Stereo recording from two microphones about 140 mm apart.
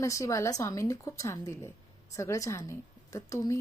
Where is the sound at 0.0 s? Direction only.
20° left (ahead or behind).